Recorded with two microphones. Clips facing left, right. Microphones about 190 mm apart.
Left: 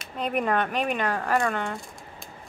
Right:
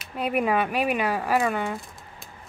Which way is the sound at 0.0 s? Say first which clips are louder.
Right 2 dB; 5° right (ahead or behind).